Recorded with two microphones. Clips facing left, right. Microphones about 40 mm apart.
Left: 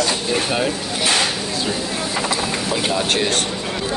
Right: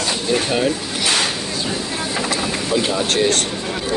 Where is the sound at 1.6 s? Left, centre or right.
Centre.